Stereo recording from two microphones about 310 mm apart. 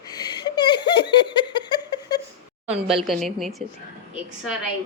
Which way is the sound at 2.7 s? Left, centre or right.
Centre.